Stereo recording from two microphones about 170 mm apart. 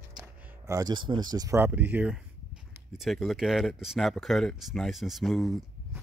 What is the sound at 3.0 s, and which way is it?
Speech, centre (ahead or behind).